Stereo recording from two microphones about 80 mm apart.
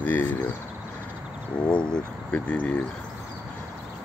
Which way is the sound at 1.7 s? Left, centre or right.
Centre.